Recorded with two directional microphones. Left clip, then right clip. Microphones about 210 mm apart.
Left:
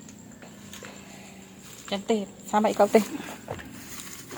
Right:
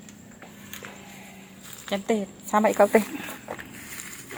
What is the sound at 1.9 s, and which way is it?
Speech, 30° right (ahead or behind).